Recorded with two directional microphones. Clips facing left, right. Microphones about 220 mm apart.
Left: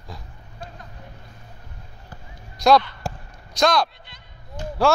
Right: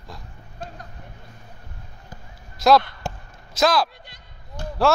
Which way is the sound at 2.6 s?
Centre (ahead or behind).